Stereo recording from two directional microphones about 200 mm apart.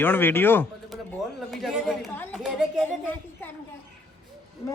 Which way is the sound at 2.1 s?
10° left (ahead or behind).